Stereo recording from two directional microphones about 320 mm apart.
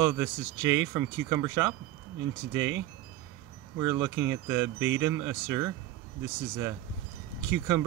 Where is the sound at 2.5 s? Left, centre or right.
Right.